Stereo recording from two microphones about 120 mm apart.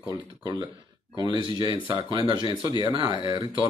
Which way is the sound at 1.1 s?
35° right (ahead or behind).